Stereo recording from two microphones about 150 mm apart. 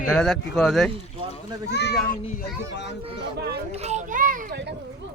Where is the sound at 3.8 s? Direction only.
55° right (ahead or behind).